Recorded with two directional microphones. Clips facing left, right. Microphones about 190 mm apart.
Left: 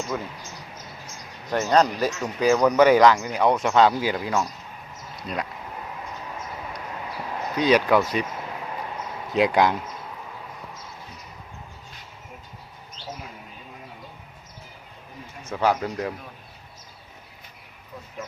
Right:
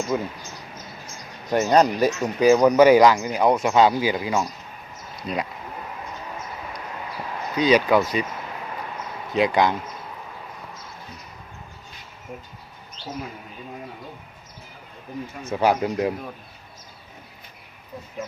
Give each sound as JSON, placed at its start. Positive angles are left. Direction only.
{"t": 0.1, "sound": "speech", "side_deg": -15}
{"t": 1.5, "sound": "speech", "side_deg": -15}
{"t": 7.5, "sound": "speech", "side_deg": 0}
{"t": 9.3, "sound": "speech", "side_deg": 5}
{"t": 15.4, "sound": "speech", "side_deg": -15}